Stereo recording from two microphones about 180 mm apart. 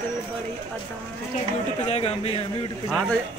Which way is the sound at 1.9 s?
35° left (ahead or behind).